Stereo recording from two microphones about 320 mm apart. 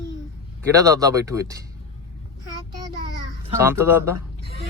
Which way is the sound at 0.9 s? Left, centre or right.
Centre.